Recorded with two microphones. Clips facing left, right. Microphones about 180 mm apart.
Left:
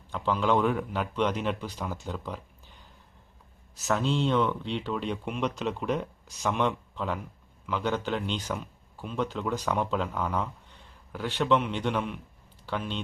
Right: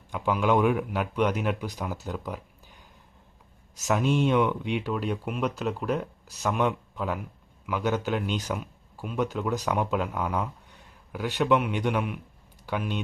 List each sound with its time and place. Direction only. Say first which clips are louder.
0.1 s speech: right 2 dB; 10° right (ahead or behind)
3.8 s speech: right 3 dB; 15° right (ahead or behind)